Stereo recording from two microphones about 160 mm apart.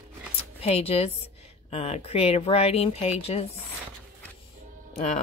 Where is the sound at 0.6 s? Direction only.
40° left (ahead or behind).